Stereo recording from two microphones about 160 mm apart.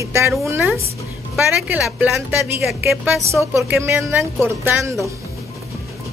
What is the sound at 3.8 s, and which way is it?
Speech, 15° right (ahead or behind).